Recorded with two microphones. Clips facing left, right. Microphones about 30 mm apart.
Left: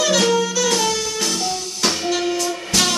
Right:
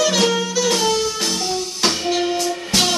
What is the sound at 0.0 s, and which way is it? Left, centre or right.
Music, centre.